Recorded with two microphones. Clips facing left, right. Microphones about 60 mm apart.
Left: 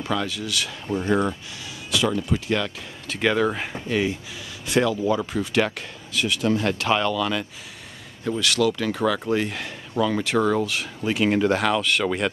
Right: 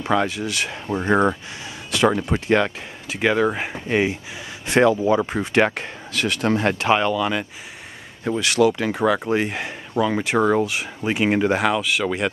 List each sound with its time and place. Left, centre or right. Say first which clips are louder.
0.0 s speech: right 5 dB; right
1.9 s speech: right 4 dB; right
3.1 s speech: right 2 dB; centre
3.9 s speech: right 3 dB; right
6.1 s speech: right 2 dB; right
6.6 s speech: right 3 dB; right; by 12.3 s centre